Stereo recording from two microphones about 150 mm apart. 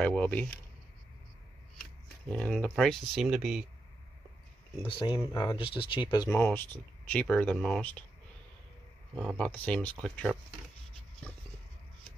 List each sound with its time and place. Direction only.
0.0 s speech: 10° left (ahead or behind)
2.2 s speech: 10° left (ahead or behind)
4.8 s speech: 30° left (ahead or behind)
6.3 s speech: 15° left (ahead or behind)
9.4 s speech: 10° left (ahead or behind)